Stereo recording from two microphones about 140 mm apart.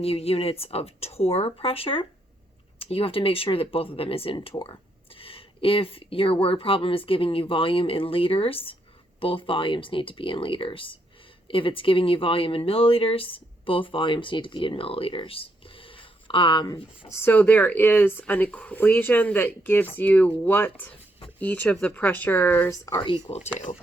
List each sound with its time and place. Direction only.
0.0 s a woman's voice: 45° left (ahead or behind)
17.1 s speech: 15° left (ahead or behind)
23.0 s a woman's voice: 35° left (ahead or behind)